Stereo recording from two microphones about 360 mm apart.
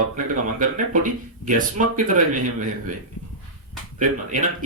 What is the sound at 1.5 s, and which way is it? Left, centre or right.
Speech, right.